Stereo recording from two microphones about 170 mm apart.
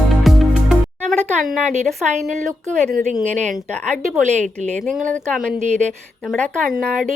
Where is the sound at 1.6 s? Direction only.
45° right (ahead or behind).